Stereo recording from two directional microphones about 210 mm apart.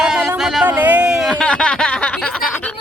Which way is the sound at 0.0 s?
5° right (ahead or behind).